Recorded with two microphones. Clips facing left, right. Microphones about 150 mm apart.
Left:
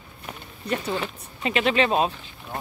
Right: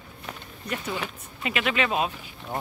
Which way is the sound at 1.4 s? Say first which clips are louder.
Left 5 dB; 30° left (ahead or behind).